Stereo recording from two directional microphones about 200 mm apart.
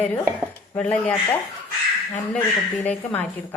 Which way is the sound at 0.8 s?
5° left (ahead or behind).